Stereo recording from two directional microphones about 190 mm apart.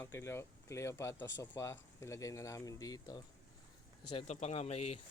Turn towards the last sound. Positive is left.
turn(degrees=35)  # may be behind; listen again after turning